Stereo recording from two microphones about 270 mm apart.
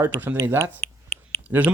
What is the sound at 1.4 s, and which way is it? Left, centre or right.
Speech, centre.